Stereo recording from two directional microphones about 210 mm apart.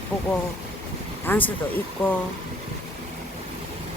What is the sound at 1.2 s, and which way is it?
Speech, 10° left (ahead or behind).